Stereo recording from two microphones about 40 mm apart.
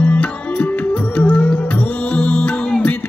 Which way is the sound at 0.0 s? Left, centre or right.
Left.